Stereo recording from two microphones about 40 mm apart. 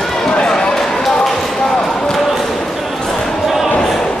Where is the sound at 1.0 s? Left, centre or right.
Centre.